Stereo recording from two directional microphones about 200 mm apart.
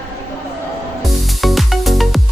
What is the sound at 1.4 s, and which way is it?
Music, centre (ahead or behind).